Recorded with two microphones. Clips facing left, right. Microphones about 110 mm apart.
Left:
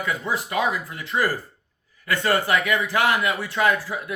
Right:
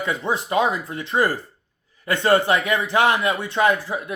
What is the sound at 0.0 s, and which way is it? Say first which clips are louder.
Speech: right 2 dB; 25° right (ahead or behind).